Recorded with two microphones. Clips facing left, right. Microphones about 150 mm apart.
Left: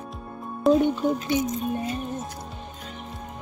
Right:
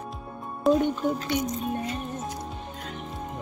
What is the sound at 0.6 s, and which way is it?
Speech, centre (ahead or behind).